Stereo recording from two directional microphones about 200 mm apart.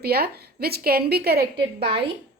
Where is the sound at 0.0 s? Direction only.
50° right (ahead or behind).